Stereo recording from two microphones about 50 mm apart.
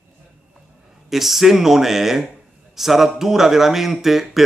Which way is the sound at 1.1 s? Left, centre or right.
Centre.